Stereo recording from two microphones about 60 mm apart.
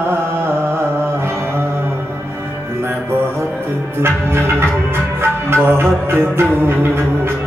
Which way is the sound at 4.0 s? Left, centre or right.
Right.